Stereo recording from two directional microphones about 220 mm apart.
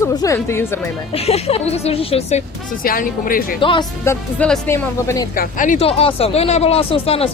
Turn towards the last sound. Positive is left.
turn(degrees=25)  # may be behind; listen again after turning